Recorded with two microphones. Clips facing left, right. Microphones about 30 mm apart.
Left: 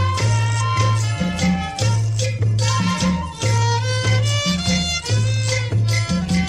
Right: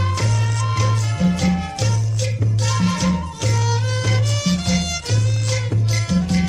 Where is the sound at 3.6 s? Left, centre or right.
Left.